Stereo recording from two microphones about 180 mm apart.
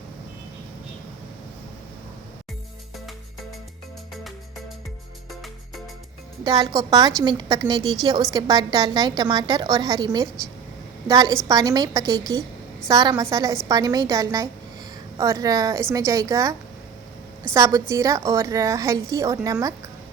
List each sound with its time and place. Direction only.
6.4 s a woman's voice: 25° right (ahead or behind)